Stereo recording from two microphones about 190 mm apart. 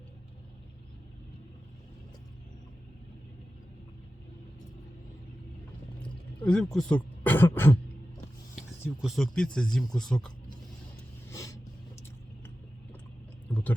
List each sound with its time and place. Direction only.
6.0 s throat clearing: 5° left (ahead or behind)
9.0 s speech: centre (ahead or behind)
11.3 s vehicle: 15° left (ahead or behind)
13.5 s a sound: 10° left (ahead or behind)